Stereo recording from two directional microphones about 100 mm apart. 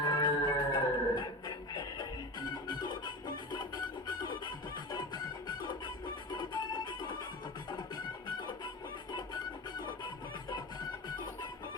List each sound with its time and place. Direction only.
0.0 s music: 45° left (ahead or behind)